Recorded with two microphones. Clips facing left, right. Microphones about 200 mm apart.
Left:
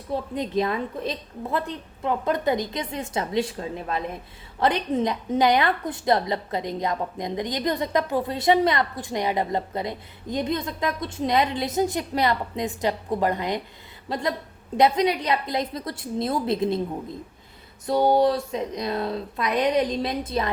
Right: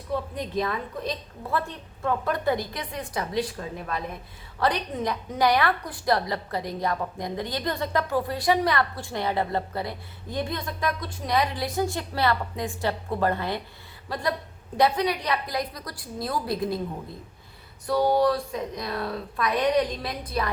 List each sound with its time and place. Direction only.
0.1 s a woman's voice: 25° left (ahead or behind)
17.8 s a woman's voice: 25° left (ahead or behind)